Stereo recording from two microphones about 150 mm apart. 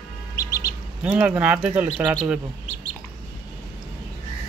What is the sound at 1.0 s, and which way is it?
Speech, 10° right (ahead or behind).